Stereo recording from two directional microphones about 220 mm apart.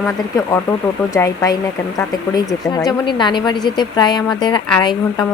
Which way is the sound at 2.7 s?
20° left (ahead or behind).